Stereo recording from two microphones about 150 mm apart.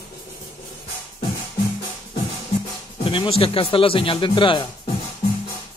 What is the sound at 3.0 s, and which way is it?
Speech, 35° left (ahead or behind).